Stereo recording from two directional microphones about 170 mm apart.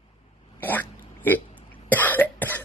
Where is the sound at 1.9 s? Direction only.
10° left (ahead or behind).